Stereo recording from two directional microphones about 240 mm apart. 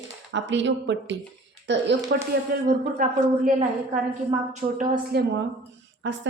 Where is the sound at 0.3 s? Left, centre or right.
Right.